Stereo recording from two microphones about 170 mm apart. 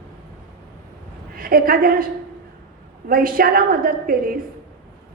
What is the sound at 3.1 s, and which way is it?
A woman's voice, 60° right (ahead or behind).